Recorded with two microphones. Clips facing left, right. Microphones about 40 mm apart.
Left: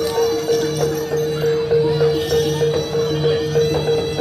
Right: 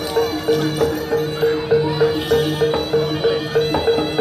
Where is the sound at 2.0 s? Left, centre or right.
Right.